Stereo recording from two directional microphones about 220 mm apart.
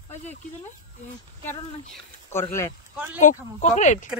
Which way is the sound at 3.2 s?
35° left (ahead or behind).